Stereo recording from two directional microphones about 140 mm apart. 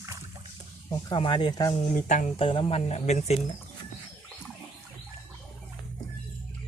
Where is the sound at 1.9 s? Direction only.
65° left (ahead or behind).